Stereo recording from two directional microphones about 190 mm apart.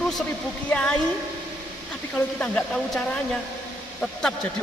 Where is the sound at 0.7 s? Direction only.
5° left (ahead or behind).